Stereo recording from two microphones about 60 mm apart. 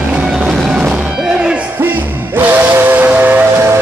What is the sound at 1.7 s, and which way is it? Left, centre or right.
Music, right.